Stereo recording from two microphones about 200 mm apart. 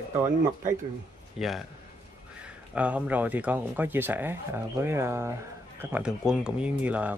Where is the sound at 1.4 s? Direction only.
Centre (ahead or behind).